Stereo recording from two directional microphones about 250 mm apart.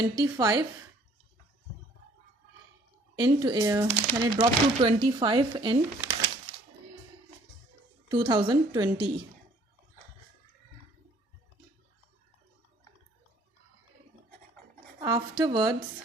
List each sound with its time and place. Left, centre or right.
0.0 s speech: centre
3.2 s speech: centre
8.1 s speech: centre
15.0 s speech: centre